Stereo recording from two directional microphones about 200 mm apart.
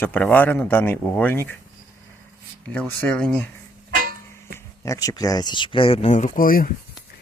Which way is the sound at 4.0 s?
45° right (ahead or behind).